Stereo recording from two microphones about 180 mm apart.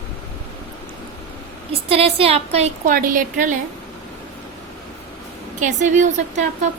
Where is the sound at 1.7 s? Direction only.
35° right (ahead or behind).